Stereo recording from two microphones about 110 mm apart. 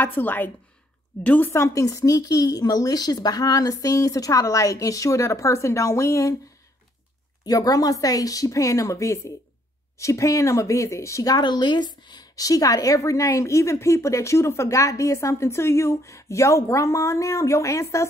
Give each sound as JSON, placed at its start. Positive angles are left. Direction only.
{"t": 0.0, "sound": "a woman's voice", "side_deg": 15}
{"t": 7.4, "sound": "a woman's voice", "side_deg": 35}